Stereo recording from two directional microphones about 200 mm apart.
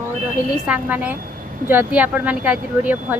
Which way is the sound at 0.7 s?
5° right (ahead or behind).